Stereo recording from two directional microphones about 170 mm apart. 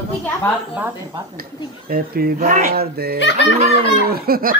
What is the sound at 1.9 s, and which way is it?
Speech, 60° right (ahead or behind).